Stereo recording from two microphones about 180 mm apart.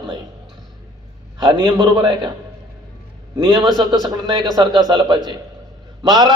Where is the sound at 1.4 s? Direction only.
25° right (ahead or behind).